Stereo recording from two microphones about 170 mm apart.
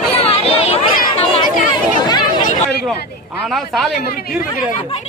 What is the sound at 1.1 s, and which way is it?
Chatter, 35° left (ahead or behind).